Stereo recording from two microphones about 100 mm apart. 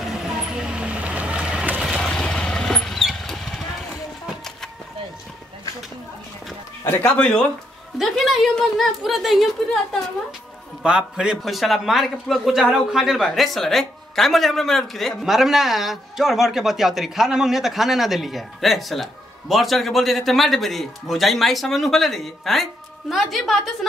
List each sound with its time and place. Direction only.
0.1 s vehicle: 5° right (ahead or behind)
1.9 s vehicle: 5° left (ahead or behind)
6.8 s a sound: 25° left (ahead or behind)
7.2 s speech: 10° left (ahead or behind)
8.0 s a man's voice: centre (ahead or behind)
10.8 s a man's voice: 10° right (ahead or behind)